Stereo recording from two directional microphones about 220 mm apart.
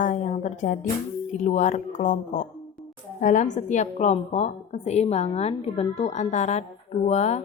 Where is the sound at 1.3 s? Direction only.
35° left (ahead or behind).